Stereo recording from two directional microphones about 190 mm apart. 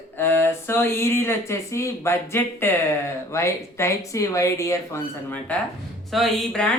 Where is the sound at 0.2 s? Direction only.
10° left (ahead or behind).